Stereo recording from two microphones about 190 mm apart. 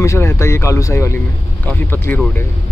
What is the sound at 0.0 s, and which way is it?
Speech, 15° left (ahead or behind).